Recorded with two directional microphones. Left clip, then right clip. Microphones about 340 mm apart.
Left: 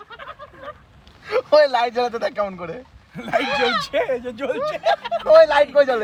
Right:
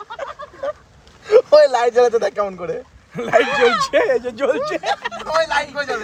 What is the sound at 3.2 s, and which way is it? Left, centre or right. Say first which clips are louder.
Speech: right 5 dB; right.